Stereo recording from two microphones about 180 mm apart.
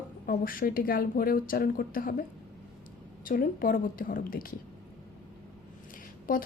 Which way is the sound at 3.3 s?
50° left (ahead or behind).